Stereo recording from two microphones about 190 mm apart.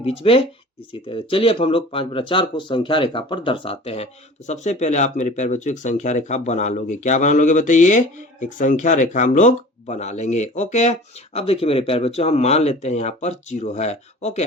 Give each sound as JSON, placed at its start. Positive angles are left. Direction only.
{"t": 0.0, "sound": "speech", "side_deg": 30}